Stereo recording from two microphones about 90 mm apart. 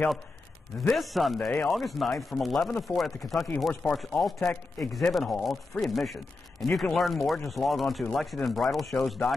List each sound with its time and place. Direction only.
0.8 s a man's voice: centre (ahead or behind)